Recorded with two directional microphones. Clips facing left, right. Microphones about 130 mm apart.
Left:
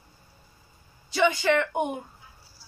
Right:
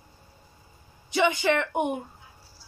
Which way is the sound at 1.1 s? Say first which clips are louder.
Left 1 dB; 20° right (ahead or behind).